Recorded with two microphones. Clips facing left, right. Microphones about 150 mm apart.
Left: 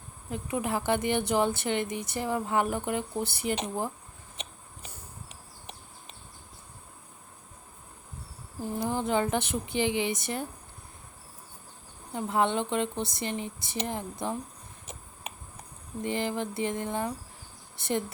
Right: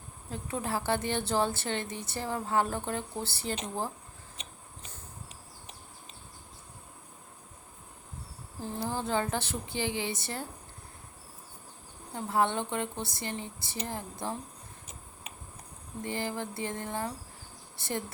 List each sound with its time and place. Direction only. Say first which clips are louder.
0.3 s a woman's voice: left 3 dB; 15° left (ahead or behind)
8.6 s a woman's voice: left 4 dB; 15° left (ahead or behind)
12.1 s a woman's voice: left 2 dB; 20° left (ahead or behind)
16.0 s a woman's voice: left 4 dB; 20° left (ahead or behind)